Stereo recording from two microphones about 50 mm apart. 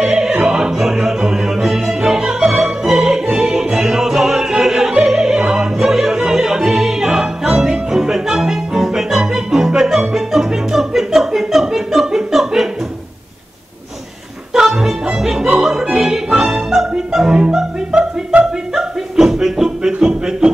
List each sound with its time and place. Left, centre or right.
0.0 s opera: centre
9.2 s music: centre
14.5 s music: centre
18.8 s a sound: centre
20.0 s music: centre